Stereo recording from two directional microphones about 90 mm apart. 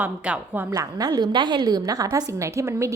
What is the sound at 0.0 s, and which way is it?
Speech, 20° right (ahead or behind).